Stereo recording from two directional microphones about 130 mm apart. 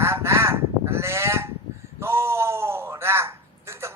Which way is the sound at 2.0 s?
20° right (ahead or behind).